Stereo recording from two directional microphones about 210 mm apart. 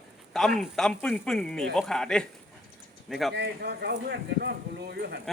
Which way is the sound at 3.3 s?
50° right (ahead or behind).